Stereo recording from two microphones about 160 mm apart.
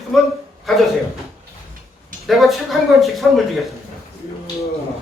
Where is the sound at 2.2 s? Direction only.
Centre (ahead or behind).